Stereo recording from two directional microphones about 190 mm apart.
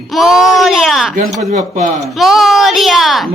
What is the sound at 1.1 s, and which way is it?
Speech, 40° right (ahead or behind).